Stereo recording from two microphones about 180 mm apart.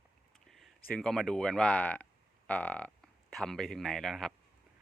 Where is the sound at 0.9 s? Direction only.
5° left (ahead or behind).